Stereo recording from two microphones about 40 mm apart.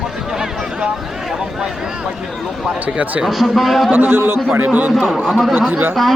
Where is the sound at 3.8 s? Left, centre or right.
Right.